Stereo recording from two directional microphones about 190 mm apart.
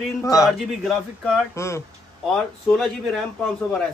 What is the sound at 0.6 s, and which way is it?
Speech, centre (ahead or behind).